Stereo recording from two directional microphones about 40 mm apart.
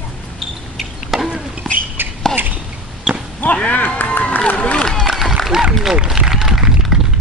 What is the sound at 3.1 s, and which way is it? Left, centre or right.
Basketball bounce, centre.